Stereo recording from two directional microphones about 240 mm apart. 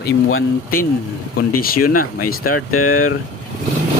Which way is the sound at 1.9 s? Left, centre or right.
Left.